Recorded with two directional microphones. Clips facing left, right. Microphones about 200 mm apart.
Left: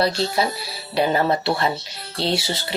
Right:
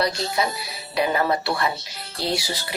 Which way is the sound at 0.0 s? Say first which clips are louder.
Left 3 dB; 30° left (ahead or behind).